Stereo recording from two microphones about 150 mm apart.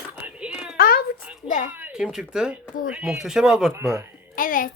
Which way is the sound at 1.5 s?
60° left (ahead or behind).